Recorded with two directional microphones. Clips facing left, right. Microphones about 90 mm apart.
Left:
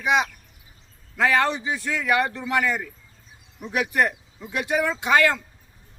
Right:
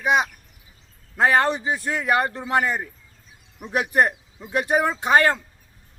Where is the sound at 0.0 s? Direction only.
40° right (ahead or behind).